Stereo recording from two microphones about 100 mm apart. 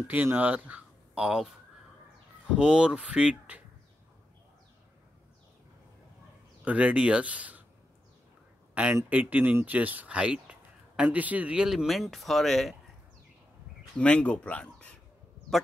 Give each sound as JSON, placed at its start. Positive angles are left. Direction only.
{"t": 0.0, "sound": "speech", "side_deg": -15}
{"t": 2.5, "sound": "speech", "side_deg": -10}
{"t": 6.6, "sound": "speech", "side_deg": -15}
{"t": 9.1, "sound": "speech", "side_deg": -15}
{"t": 13.9, "sound": "speech", "side_deg": 10}